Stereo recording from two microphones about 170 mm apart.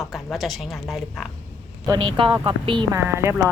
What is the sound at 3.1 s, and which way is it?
Speech, 15° right (ahead or behind).